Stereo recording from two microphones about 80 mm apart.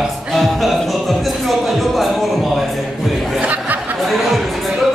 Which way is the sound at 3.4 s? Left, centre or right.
Centre.